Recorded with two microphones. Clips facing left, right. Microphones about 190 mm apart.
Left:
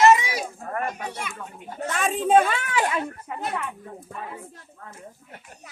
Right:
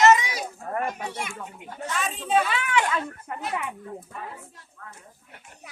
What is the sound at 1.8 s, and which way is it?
Speech, 50° left (ahead or behind).